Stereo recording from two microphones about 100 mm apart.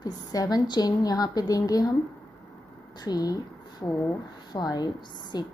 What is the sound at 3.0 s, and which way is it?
Speech, 40° left (ahead or behind).